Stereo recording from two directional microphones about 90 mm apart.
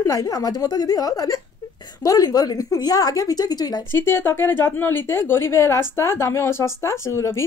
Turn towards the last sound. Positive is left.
turn(degrees=30)  # may be behind; listen again after turning